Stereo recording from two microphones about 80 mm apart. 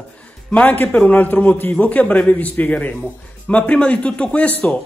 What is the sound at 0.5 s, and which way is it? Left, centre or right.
A man's voice, left.